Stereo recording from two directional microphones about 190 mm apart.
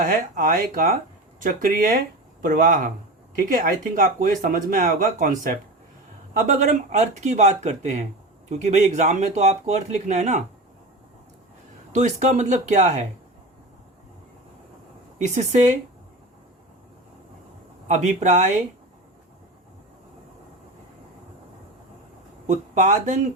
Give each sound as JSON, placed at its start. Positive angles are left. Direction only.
{"t": 0.0, "sound": "speech", "side_deg": -50}
{"t": 11.9, "sound": "speech", "side_deg": -40}
{"t": 15.4, "sound": "speech", "side_deg": -40}
{"t": 17.8, "sound": "speech", "side_deg": -40}
{"t": 22.4, "sound": "speech", "side_deg": -40}